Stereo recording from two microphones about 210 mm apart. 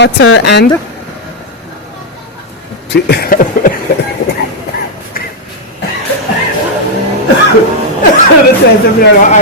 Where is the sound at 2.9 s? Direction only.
50° left (ahead or behind).